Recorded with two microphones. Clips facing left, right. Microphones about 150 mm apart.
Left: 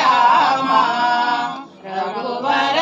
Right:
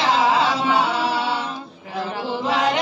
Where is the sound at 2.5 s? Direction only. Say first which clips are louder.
Left 2 dB; 85° left.